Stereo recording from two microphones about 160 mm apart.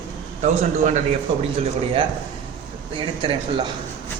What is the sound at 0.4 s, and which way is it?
Speech, 50° right (ahead or behind).